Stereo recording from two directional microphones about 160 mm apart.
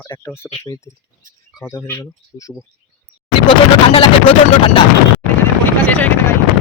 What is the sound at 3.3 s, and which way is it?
Vehicle, 35° left (ahead or behind).